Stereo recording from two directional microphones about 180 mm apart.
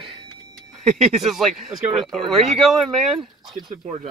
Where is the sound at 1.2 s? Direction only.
Centre (ahead or behind).